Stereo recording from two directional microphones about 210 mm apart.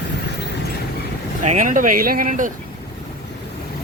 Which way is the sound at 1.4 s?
35° right (ahead or behind).